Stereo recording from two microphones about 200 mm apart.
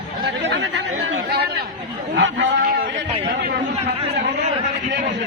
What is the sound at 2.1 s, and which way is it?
Speech, 65° right (ahead or behind).